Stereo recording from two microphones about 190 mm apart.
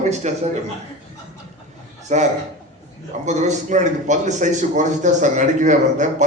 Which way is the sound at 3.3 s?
40° right (ahead or behind).